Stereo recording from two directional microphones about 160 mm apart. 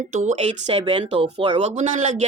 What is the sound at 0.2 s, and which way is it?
Speech, 50° right (ahead or behind).